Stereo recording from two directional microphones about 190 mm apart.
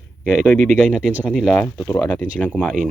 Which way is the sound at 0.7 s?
5° left (ahead or behind).